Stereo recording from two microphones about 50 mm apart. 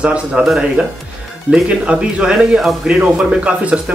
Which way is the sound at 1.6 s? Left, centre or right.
Right.